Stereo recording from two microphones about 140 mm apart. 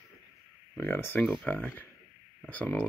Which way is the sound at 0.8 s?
15° left (ahead or behind).